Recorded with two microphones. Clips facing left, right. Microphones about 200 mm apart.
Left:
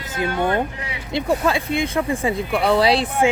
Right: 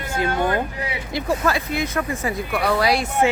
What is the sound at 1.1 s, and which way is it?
Speech, 25° left (ahead or behind).